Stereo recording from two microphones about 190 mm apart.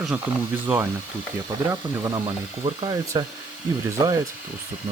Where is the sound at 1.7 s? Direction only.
20° right (ahead or behind).